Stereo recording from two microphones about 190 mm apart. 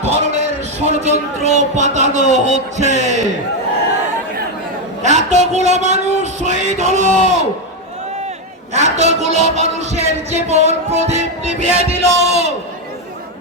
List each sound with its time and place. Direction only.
0.8 s music: 35° right (ahead or behind)
5.0 s music: 35° right (ahead or behind)
8.7 s music: 35° right (ahead or behind)